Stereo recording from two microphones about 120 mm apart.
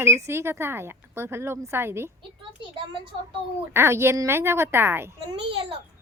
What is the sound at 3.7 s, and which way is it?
Speech, 20° right (ahead or behind).